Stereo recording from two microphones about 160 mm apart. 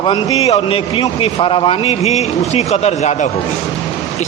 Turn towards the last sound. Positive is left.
turn(degrees=45)  # may be behind; listen again after turning